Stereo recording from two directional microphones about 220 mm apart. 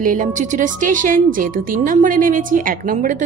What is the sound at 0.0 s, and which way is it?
A woman's voice, 35° right (ahead or behind).